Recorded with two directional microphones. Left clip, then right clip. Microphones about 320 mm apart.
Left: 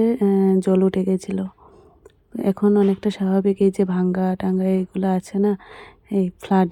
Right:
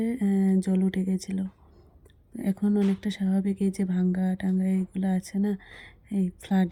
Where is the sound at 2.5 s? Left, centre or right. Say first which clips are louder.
Left 10 dB; left.